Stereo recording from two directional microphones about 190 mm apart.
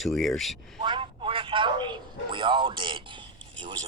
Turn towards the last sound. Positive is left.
turn(degrees=-25)  # may be behind; listen again after turning